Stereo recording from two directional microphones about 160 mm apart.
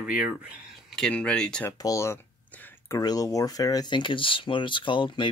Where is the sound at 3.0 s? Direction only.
25° left (ahead or behind).